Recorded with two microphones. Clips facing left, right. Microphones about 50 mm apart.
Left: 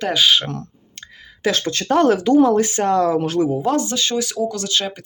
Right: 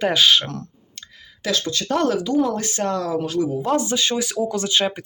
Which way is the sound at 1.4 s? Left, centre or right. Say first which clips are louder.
Left 3 dB; left.